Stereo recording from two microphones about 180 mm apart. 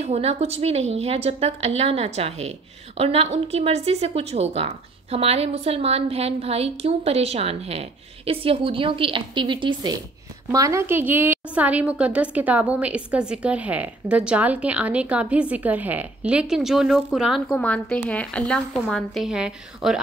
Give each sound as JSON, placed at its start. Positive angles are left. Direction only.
{"t": 0.0, "sound": "a woman's voice", "side_deg": -35}